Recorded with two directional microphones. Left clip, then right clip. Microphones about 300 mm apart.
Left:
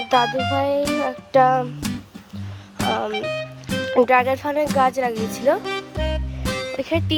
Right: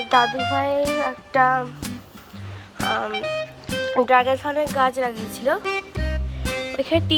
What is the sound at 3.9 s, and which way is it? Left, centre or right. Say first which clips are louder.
Speech: left 1 dB; left.